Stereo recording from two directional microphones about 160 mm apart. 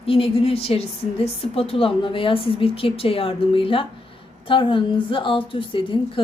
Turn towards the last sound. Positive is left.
turn(degrees=35)  # may be behind; listen again after turning